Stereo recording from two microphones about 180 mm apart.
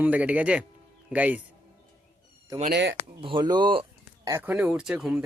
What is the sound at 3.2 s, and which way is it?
Speech, 25° right (ahead or behind).